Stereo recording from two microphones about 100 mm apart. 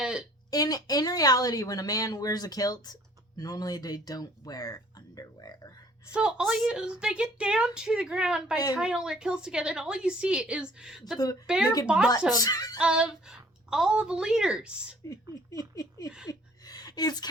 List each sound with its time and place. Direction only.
0.0 s a sound: 5° right (ahead or behind)
0.5 s speech: 40° left (ahead or behind)
6.1 s a woman's voice: 10° right (ahead or behind)
12.3 s speech: 35° left (ahead or behind)
12.8 s a woman's voice: 10° right (ahead or behind)
15.1 s speech: 35° left (ahead or behind)
16.3 s a sound: 40° left (ahead or behind)